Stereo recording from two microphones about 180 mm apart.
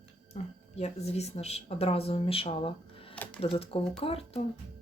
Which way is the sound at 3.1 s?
5° left (ahead or behind).